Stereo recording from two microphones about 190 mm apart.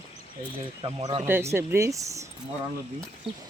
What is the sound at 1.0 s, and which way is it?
Speech, 35° right (ahead or behind).